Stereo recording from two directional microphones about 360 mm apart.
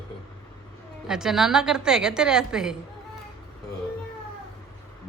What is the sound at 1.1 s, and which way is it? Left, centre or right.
A woman's voice, centre.